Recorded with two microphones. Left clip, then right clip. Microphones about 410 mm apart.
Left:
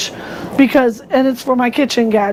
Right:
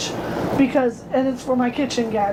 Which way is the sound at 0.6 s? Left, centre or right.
Left.